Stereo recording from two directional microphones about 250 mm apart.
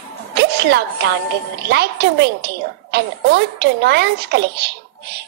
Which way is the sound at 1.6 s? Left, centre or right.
Right.